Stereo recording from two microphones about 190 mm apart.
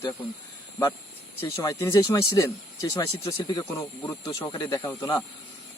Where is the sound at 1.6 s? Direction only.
15° left (ahead or behind).